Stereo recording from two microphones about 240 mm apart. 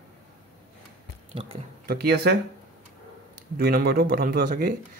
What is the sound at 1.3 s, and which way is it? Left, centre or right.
Speech, right.